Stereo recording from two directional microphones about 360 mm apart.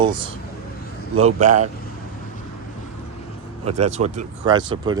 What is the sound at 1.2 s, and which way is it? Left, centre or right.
Speech, centre.